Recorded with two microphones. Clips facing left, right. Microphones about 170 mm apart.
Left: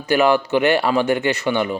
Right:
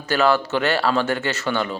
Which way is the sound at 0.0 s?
15° left (ahead or behind).